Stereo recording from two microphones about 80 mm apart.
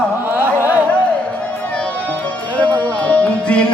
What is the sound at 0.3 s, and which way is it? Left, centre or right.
Carnatic music, right.